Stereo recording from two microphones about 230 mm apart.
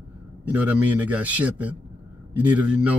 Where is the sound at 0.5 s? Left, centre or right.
Centre.